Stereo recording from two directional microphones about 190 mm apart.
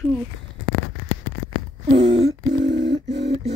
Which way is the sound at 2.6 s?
70° right (ahead or behind).